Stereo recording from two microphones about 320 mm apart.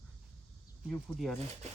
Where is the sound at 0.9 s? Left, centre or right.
Centre.